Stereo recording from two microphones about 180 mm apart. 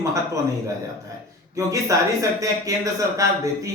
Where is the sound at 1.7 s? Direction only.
20° right (ahead or behind).